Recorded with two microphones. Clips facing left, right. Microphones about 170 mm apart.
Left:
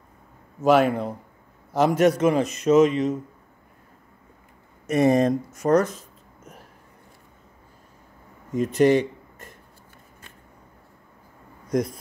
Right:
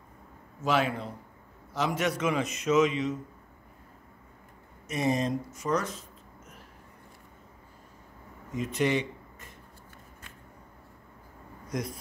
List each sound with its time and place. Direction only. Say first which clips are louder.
0.7 s a man's voice: left 9 dB; 50° left (ahead or behind)
4.8 s speech: left 9 dB; 55° left (ahead or behind)
8.5 s speech: left 9 dB; 40° left (ahead or behind)